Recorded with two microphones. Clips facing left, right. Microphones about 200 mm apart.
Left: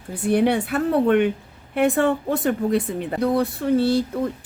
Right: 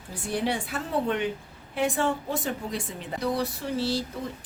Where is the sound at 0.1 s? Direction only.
60° left (ahead or behind).